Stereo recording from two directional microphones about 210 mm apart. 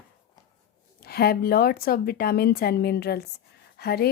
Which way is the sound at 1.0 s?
50° left (ahead or behind).